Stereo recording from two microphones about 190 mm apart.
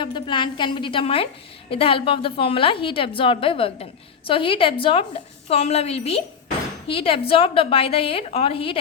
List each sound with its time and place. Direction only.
0.0 s a woman's voice: 25° left (ahead or behind)